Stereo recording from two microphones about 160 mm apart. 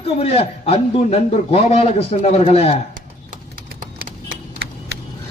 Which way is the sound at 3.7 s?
65° right (ahead or behind).